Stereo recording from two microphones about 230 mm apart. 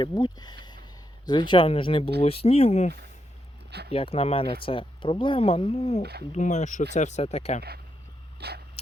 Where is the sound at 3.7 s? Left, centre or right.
Right.